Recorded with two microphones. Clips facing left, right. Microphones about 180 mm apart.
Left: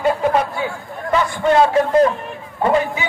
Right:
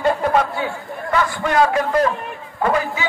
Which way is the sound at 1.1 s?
25° left (ahead or behind).